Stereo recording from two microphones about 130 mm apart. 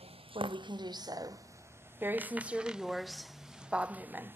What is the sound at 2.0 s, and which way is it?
Speech, 15° right (ahead or behind).